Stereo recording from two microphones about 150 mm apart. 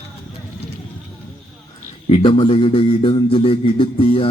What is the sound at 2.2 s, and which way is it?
A man's voice, 35° left (ahead or behind).